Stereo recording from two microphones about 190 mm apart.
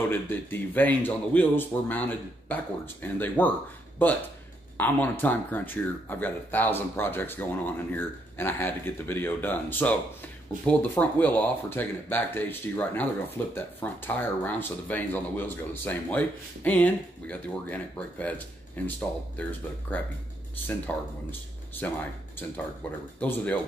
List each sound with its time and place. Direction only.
0.1 s speech: 10° left (ahead or behind)
23.1 s speech: 10° left (ahead or behind)